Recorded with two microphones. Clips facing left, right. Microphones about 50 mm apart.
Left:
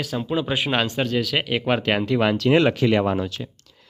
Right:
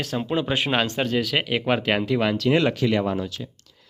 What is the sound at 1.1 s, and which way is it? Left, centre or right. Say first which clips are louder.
Speech: even; centre.